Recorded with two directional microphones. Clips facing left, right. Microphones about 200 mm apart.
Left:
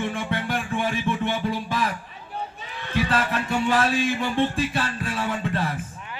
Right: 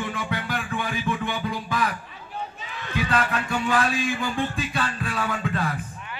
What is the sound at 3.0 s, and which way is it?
Music, 30° left (ahead or behind).